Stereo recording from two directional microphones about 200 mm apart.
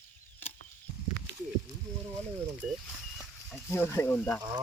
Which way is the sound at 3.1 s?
5° left (ahead or behind).